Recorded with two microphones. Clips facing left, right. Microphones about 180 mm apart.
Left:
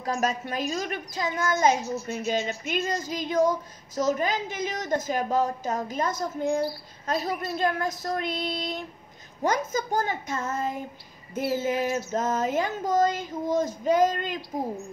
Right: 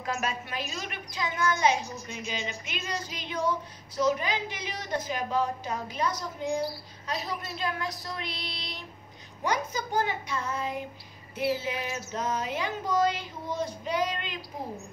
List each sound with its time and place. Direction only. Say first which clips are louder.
0.0 s a woman's voice: left 5 dB; 40° left (ahead or behind)
1.8 s a woman's voice: left 7 dB; 5° left (ahead or behind)
2.1 s child singing: left 7 dB; 50° left (ahead or behind)